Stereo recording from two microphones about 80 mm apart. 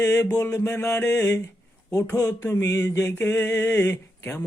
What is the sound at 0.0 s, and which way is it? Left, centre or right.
Mantra, left.